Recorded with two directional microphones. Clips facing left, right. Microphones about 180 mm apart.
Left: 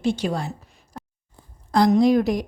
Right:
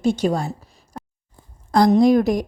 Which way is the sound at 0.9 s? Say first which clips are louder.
Right 3 dB; centre (ahead or behind).